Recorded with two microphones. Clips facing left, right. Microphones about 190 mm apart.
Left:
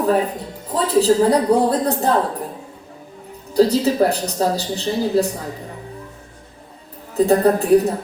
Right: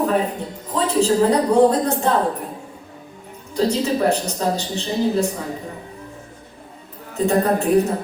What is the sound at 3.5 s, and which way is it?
A man's voice, 35° left (ahead or behind).